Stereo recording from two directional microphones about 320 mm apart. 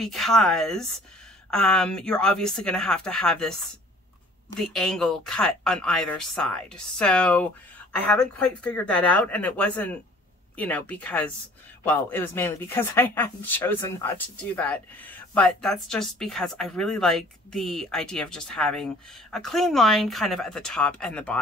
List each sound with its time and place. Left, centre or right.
0.0 s speech: centre
4.6 s speech: centre